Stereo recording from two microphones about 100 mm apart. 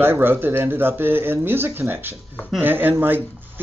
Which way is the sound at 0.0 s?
20° right (ahead or behind).